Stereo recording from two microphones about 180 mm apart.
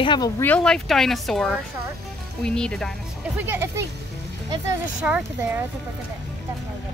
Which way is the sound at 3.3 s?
10° right (ahead or behind).